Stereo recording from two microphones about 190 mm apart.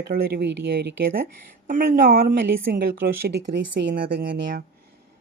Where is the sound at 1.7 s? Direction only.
50° right (ahead or behind).